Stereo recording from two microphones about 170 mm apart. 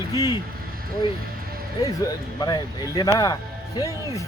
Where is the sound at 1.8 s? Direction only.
20° left (ahead or behind).